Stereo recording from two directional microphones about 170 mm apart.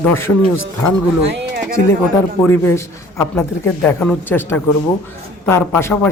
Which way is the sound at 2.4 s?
15° left (ahead or behind).